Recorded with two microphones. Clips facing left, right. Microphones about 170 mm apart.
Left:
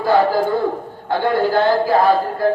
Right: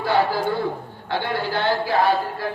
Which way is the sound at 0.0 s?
45° left (ahead or behind).